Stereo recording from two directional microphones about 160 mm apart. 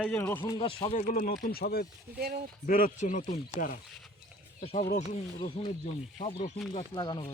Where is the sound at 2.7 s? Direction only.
60° left (ahead or behind).